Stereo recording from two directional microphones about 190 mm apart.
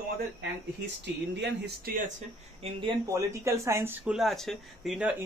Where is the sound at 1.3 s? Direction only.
60° right (ahead or behind).